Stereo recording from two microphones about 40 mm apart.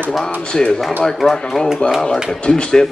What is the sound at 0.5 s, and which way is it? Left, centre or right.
A man's voice, left.